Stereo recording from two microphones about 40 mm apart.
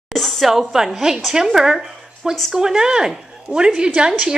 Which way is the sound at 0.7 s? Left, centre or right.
Centre.